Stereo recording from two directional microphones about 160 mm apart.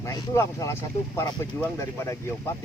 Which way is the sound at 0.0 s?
20° left (ahead or behind).